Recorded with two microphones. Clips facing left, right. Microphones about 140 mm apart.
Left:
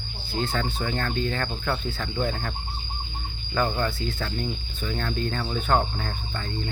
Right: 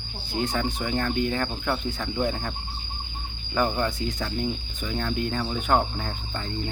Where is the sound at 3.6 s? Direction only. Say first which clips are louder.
Right 1 dB; 15° right (ahead or behind).